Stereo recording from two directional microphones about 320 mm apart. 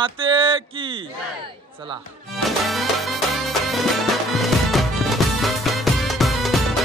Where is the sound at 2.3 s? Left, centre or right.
Centre.